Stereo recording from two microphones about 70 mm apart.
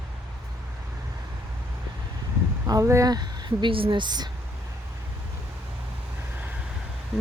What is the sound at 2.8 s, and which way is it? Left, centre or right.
Speech, right.